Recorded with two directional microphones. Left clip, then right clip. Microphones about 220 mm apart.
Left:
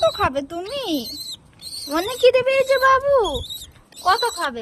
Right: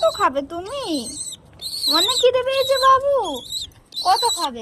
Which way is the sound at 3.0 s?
40° left (ahead or behind).